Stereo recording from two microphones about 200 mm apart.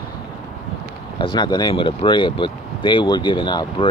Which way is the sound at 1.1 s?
20° left (ahead or behind).